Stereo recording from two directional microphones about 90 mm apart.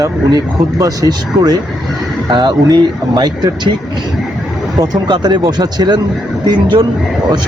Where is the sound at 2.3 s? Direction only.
55° right (ahead or behind).